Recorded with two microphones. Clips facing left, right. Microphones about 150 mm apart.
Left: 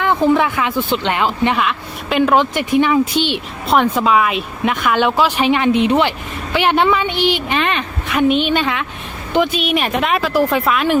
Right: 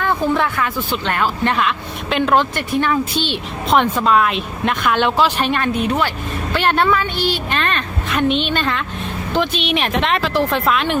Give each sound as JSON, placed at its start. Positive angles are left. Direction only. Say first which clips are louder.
{"t": 0.0, "sound": "speech", "louder": "left 4 dB", "side_deg": 15}